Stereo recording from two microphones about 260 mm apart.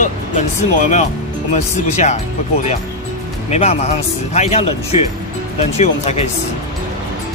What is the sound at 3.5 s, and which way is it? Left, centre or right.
Speech, left.